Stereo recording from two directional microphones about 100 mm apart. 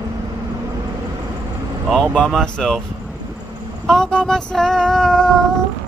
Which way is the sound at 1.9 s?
5° left (ahead or behind).